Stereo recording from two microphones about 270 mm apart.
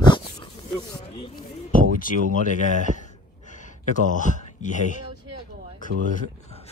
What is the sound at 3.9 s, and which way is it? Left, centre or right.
Speech, left.